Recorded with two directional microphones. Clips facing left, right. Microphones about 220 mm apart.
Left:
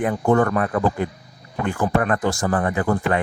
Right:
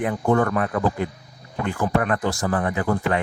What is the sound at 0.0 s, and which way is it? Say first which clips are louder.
Speech: left 2 dB; 45° left (ahead or behind).